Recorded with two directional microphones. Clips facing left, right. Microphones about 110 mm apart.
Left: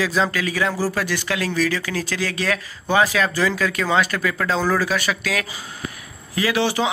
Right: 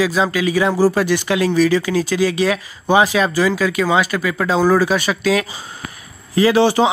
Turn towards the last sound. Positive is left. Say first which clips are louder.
# right 7 dB
turn(degrees=-30)  # may be behind; listen again after turning